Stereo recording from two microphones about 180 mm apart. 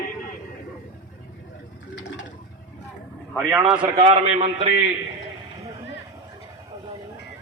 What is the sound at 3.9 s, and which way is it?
Speech, 35° right (ahead or behind).